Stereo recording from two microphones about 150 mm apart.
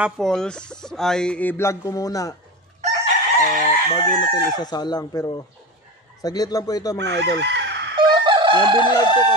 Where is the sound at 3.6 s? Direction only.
40° left (ahead or behind).